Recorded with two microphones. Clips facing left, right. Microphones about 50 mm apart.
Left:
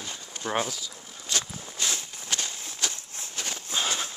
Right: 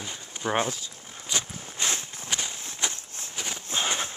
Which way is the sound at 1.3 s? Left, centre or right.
Right.